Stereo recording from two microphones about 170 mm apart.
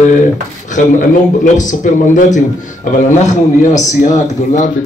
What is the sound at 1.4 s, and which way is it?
Speech, 45° left (ahead or behind).